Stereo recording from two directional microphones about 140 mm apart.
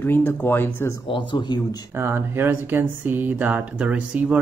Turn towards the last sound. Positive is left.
turn(degrees=-10)  # may be behind; listen again after turning